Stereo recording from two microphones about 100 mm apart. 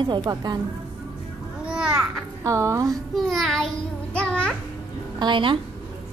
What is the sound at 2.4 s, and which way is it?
Music, 30° right (ahead or behind).